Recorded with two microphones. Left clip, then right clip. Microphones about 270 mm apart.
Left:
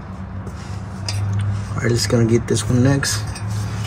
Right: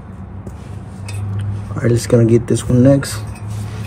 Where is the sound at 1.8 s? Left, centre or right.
Right.